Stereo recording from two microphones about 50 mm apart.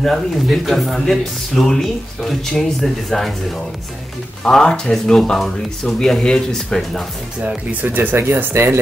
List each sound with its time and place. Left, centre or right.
0.0 s speech: centre
4.5 s speech: centre
7.4 s speech: right